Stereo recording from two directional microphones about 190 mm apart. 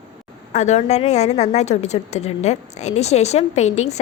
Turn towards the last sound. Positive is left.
turn(degrees=35)  # may be behind; listen again after turning